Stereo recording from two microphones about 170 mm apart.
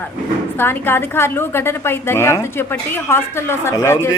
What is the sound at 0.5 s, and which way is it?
A woman's voice, 15° left (ahead or behind).